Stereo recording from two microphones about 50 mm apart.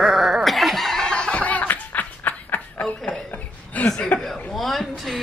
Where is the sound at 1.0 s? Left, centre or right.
Centre.